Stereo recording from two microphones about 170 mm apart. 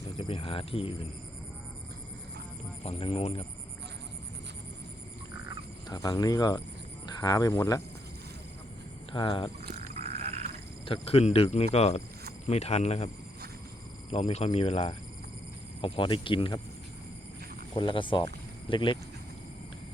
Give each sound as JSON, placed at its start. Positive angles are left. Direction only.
{"t": 0.2, "sound": "speech", "side_deg": 30}
{"t": 2.8, "sound": "speech", "side_deg": 35}
{"t": 5.9, "sound": "speech", "side_deg": 20}
{"t": 9.1, "sound": "speech", "side_deg": 30}
{"t": 9.9, "sound": "frog", "side_deg": -40}
{"t": 10.8, "sound": "speech", "side_deg": 35}
{"t": 14.1, "sound": "speech", "side_deg": 40}
{"t": 17.7, "sound": "speech", "side_deg": 30}